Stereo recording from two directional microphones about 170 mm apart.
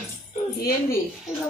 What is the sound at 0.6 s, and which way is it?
Speech, 60° left (ahead or behind).